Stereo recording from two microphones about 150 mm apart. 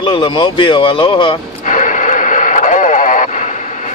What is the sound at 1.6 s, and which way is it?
Radio, 60° left (ahead or behind).